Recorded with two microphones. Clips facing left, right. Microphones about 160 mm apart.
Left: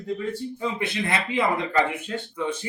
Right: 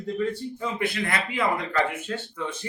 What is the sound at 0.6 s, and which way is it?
Speech, 25° left (ahead or behind).